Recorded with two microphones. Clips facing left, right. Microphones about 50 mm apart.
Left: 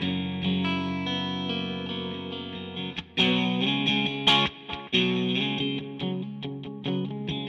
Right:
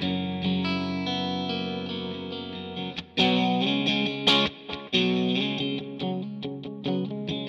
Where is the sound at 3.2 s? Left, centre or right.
Left.